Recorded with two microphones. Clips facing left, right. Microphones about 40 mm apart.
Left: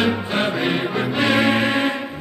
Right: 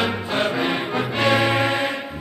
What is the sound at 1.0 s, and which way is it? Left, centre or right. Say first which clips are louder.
Music: even; centre.